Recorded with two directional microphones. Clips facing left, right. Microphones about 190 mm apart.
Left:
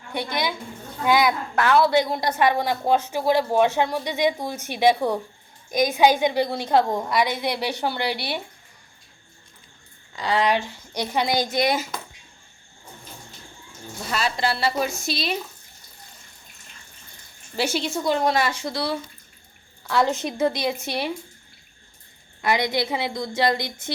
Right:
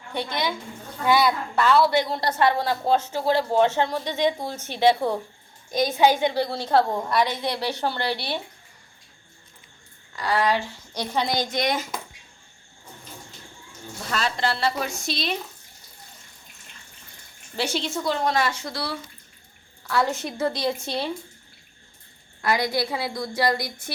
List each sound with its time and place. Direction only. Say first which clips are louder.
0.1 s speech: left 1 dB; 10° left (ahead or behind)
10.2 s speech: left 1 dB; 20° left (ahead or behind)
14.1 s speech: left 1 dB; 10° left (ahead or behind)
17.6 s speech: left 2 dB; 10° left (ahead or behind)
22.4 s a woman's voice: left 1 dB; 20° left (ahead or behind)